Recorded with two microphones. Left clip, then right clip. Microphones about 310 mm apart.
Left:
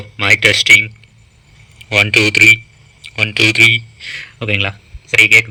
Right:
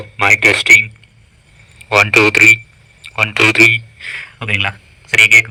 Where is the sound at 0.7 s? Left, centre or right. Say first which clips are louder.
Right 1 dB; centre.